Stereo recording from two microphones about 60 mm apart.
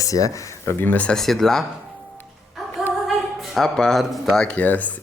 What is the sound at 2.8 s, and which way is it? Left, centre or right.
Female singing, centre.